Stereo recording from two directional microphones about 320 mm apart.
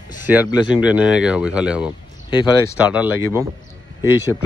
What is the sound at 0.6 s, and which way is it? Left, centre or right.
Speech, centre.